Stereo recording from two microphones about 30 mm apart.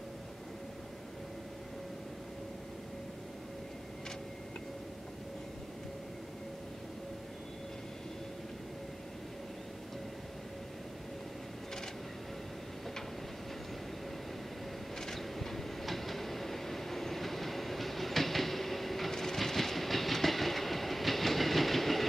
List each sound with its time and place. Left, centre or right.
15.0 s train: centre